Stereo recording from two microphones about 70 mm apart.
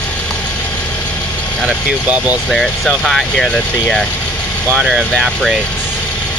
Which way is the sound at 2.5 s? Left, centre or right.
Centre.